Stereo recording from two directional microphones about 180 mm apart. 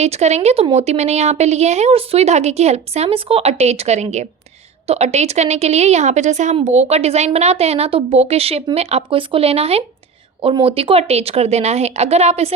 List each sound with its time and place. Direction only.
0.0 s a woman's voice: 40° right (ahead or behind)